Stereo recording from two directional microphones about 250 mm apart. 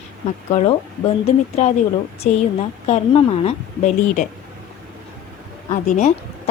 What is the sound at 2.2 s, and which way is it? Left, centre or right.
A woman's voice, left.